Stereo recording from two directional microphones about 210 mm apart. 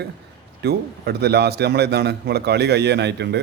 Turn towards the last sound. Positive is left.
turn(degrees=-55)  # may be behind; listen again after turning